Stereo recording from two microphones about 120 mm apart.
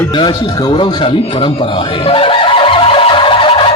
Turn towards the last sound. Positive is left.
turn(degrees=50)  # may be behind; listen again after turning